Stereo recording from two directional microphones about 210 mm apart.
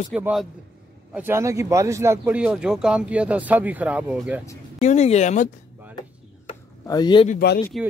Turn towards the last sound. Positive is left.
turn(degrees=0)  # may be behind; listen again after turning